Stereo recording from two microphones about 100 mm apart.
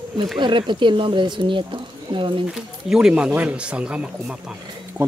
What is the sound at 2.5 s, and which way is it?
Speech, 5° right (ahead or behind).